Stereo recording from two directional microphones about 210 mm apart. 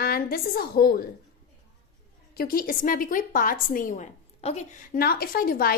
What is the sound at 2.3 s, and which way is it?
A woman's voice, 45° left (ahead or behind).